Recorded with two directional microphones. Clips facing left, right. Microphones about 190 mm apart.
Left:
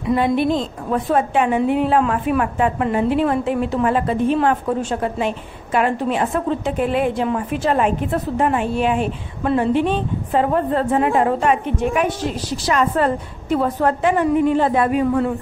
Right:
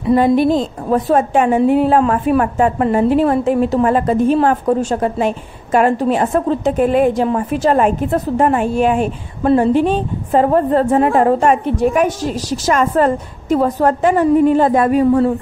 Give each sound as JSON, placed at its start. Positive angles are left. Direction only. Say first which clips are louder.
{"t": 0.1, "sound": "a woman's voice", "louder": "right 5 dB", "side_deg": -40}